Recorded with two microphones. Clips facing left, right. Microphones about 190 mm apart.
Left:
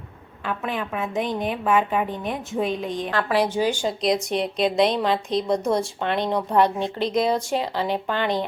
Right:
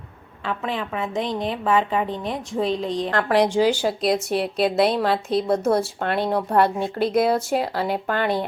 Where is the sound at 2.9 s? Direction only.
25° right (ahead or behind).